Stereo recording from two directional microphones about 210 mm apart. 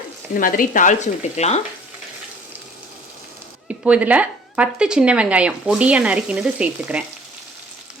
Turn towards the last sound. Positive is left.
turn(degrees=-5)  # may be behind; listen again after turning